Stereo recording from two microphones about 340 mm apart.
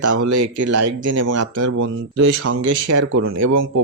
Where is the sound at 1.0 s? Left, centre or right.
Right.